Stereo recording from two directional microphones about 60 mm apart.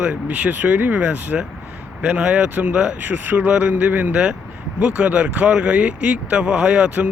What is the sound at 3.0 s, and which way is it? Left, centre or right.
Speech, right.